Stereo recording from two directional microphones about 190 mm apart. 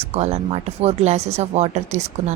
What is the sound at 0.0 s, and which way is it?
A woman's voice, 35° right (ahead or behind).